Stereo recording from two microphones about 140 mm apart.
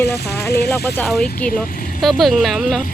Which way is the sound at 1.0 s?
5° left (ahead or behind).